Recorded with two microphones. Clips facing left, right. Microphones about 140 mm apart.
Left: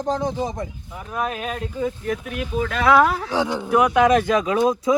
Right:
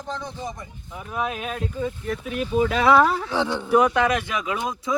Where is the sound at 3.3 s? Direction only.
10° left (ahead or behind).